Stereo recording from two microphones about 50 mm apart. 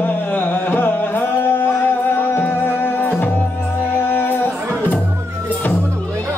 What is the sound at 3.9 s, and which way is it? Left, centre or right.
Music, left.